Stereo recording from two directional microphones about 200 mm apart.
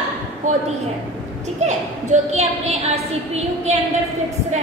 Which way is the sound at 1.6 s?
35° right (ahead or behind).